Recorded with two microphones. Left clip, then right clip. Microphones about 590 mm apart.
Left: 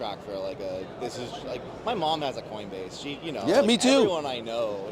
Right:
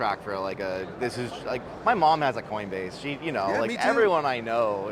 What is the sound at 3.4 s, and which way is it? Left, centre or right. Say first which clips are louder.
Speech: left 4 dB; left.